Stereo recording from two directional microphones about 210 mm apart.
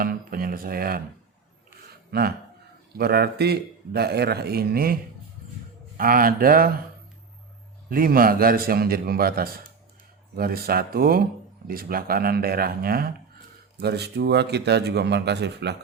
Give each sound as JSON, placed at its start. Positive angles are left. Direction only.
{"t": 0.0, "sound": "speech", "side_deg": -45}
{"t": 2.0, "sound": "a man's voice", "side_deg": -50}
{"t": 6.0, "sound": "a man's voice", "side_deg": -40}
{"t": 7.9, "sound": "a man's voice", "side_deg": -45}